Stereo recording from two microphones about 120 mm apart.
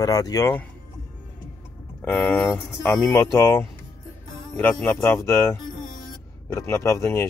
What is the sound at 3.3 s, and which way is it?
Speech, 25° left (ahead or behind).